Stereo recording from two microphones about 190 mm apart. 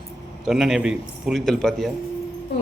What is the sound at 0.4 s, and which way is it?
A man's voice, centre (ahead or behind).